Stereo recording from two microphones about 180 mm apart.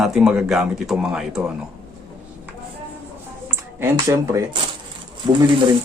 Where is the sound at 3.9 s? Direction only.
20° right (ahead or behind).